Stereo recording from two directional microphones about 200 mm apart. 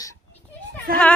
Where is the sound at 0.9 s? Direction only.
45° right (ahead or behind).